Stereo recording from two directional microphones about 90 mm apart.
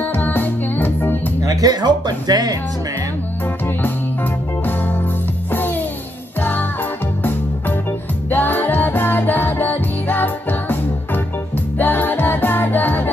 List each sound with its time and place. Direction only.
0.0 s music: 20° left (ahead or behind)
1.4 s speech: 45° right (ahead or behind)
8.3 s music: 20° left (ahead or behind)
11.8 s music: 20° left (ahead or behind)